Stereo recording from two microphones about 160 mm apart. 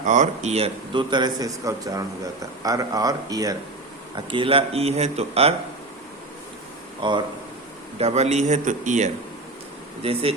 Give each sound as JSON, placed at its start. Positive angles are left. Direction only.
{"t": 0.0, "sound": "a man's voice", "side_deg": -50}
{"t": 7.0, "sound": "a man's voice", "side_deg": -30}
{"t": 7.9, "sound": "speech", "side_deg": -40}
{"t": 10.0, "sound": "speech", "side_deg": -35}